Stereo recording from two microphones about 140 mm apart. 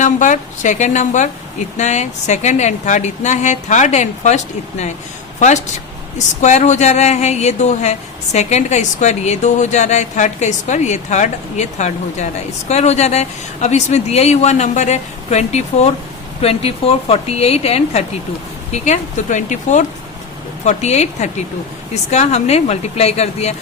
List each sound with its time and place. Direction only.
0.0 s a woman's voice: 60° left (ahead or behind)
6.1 s a woman's voice: 60° left (ahead or behind)
18.7 s a woman's voice: 60° left (ahead or behind)